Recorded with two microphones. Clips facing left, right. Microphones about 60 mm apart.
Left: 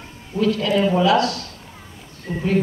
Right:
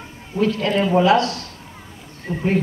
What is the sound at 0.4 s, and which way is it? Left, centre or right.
A woman's voice, right.